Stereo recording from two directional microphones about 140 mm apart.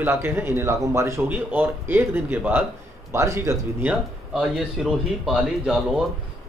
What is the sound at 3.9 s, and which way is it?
Speech, 5° right (ahead or behind).